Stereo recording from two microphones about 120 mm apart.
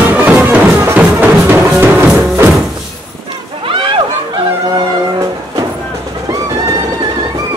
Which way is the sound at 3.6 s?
50° right (ahead or behind).